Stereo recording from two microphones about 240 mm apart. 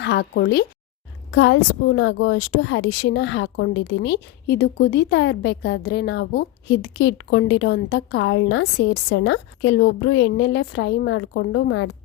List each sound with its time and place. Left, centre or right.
0.0 s a woman's voice: left